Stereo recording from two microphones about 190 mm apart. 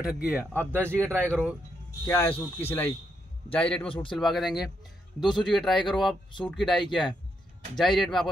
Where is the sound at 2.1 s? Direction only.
10° left (ahead or behind).